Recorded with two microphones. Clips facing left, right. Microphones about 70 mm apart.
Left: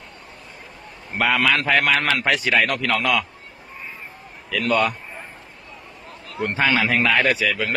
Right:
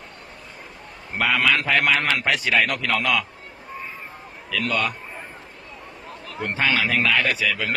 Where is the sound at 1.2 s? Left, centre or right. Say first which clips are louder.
Left 1 dB; centre.